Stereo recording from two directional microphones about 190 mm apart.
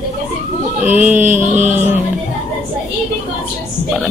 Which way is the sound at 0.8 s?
10° right (ahead or behind).